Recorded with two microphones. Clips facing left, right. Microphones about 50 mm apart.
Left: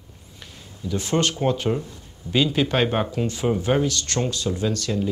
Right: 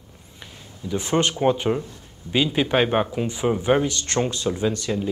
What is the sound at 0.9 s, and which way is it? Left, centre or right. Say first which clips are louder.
Speech: right 1 dB; right.